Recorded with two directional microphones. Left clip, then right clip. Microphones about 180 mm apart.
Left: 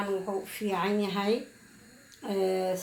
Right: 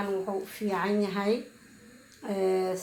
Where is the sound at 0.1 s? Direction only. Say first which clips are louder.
Right 1 dB; centre (ahead or behind).